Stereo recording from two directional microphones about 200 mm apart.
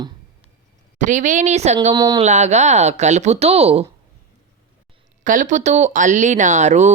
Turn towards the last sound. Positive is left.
turn(degrees=-35)  # may be behind; listen again after turning